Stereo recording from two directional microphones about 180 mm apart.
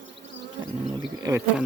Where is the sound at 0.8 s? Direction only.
30° right (ahead or behind).